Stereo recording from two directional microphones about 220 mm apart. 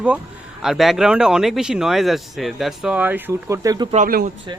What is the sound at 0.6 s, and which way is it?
Speech, centre (ahead or behind).